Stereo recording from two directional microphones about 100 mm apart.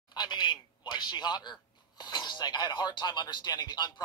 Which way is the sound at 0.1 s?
45° left (ahead or behind).